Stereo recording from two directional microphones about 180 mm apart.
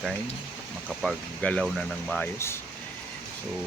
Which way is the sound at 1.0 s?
5° left (ahead or behind).